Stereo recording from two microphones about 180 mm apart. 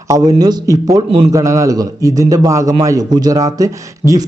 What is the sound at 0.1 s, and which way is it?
A man's voice, 20° right (ahead or behind).